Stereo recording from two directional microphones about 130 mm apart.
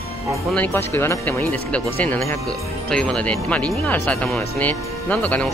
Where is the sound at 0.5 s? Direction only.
15° left (ahead or behind).